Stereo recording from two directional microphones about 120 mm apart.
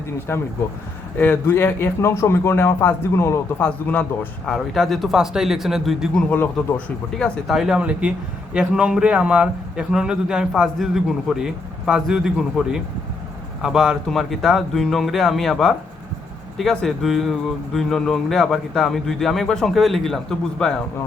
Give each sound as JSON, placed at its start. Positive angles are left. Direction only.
{"t": 0.3, "sound": "speech", "side_deg": 20}
{"t": 3.6, "sound": "speech", "side_deg": 10}
{"t": 4.4, "sound": "speech", "side_deg": 0}
{"t": 6.3, "sound": "speech", "side_deg": 15}
{"t": 7.1, "sound": "speech", "side_deg": 5}